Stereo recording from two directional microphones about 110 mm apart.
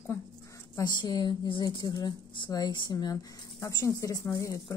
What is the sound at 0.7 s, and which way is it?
A woman's voice, 40° left (ahead or behind).